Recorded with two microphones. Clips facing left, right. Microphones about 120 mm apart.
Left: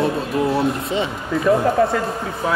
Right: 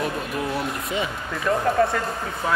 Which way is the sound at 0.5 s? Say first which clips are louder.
Left 7 dB; 30° left (ahead or behind).